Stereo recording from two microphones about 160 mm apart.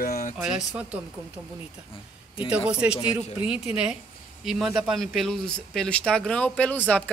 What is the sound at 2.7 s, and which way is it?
Speech, 5° right (ahead or behind).